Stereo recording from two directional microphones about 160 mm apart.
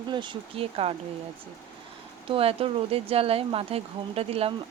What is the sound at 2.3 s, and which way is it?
Speech, 35° right (ahead or behind).